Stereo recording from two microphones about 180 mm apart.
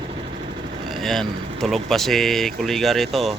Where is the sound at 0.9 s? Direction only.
Centre (ahead or behind).